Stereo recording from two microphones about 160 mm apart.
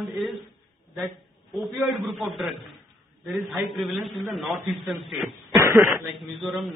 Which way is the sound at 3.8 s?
Centre (ahead or behind).